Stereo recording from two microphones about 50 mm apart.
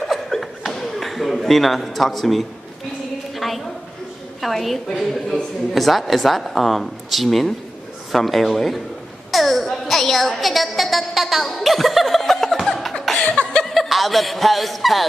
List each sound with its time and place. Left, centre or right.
0.0 s chuckle: centre
3.3 s a sound: centre
4.4 s a woman's voice: centre
9.3 s music: centre
13.0 s laughter: centre
13.4 s chuckle: left
13.7 s speech: centre